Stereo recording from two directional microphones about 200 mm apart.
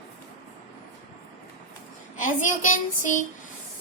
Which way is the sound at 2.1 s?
40° left (ahead or behind).